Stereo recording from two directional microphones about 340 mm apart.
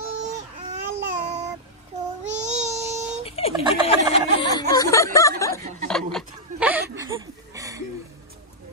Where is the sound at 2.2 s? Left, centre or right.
Right.